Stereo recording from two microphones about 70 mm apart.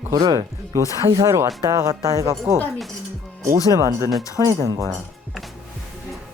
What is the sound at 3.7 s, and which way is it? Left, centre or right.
Speech, right.